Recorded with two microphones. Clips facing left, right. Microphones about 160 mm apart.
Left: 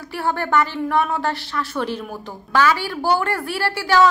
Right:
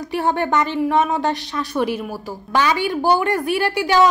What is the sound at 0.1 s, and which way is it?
A woman's voice, 20° right (ahead or behind).